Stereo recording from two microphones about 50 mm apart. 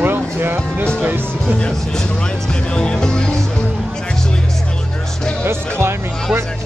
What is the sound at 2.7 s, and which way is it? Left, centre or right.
Music, centre.